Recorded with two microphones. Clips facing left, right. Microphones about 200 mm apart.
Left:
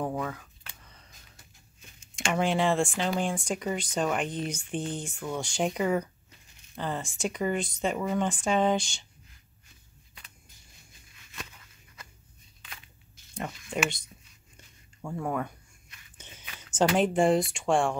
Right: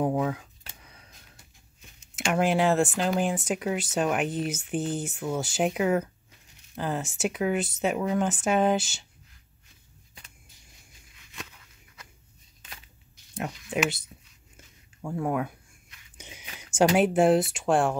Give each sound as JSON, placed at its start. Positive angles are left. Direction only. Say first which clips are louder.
{"t": 0.0, "sound": "speech", "louder": "right 6 dB", "side_deg": -15}
{"t": 2.1, "sound": "speech", "louder": "right 3 dB", "side_deg": -5}
{"t": 11.3, "sound": "a sound", "louder": "right 1 dB", "side_deg": 0}
{"t": 13.8, "sound": "speech", "louder": "right 3 dB", "side_deg": -5}